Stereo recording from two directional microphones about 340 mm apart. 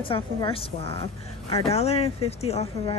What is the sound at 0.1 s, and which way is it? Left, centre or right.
A woman's voice, centre.